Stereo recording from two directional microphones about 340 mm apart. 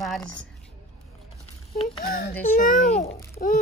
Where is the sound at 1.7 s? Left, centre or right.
Centre.